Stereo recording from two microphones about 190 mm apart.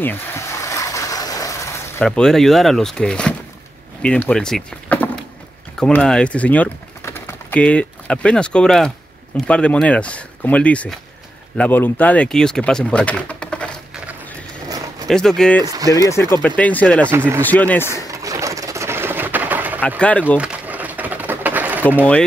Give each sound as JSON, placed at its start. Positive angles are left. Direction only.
{"t": 0.0, "sound": "a sound", "side_deg": 10}
{"t": 2.0, "sound": "speech", "side_deg": 0}
{"t": 14.7, "sound": "a sound", "side_deg": -20}
{"t": 15.0, "sound": "speech", "side_deg": 0}
{"t": 15.6, "sound": "speech", "side_deg": -20}
{"t": 16.1, "sound": "speech", "side_deg": 15}
{"t": 17.1, "sound": "speech", "side_deg": -10}
{"t": 17.4, "sound": "speech", "side_deg": 10}
{"t": 18.0, "sound": "a sound", "side_deg": -15}
{"t": 20.0, "sound": "speech", "side_deg": 5}
{"t": 20.3, "sound": "pigeon", "side_deg": -5}